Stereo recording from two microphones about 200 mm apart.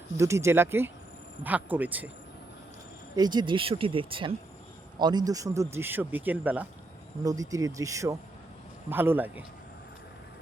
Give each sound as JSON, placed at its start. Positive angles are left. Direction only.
{"t": 0.2, "sound": "speech", "side_deg": -15}
{"t": 3.2, "sound": "speech", "side_deg": -20}